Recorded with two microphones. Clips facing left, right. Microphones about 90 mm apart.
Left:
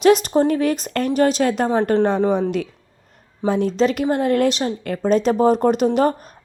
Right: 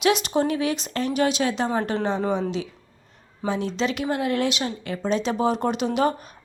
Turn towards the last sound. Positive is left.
turn(degrees=40)  # may be behind; listen again after turning